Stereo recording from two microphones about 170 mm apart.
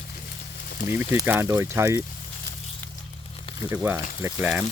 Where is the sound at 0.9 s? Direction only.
15° right (ahead or behind).